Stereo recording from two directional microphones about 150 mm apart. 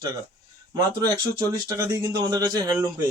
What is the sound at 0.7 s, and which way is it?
Speech, 25° right (ahead or behind).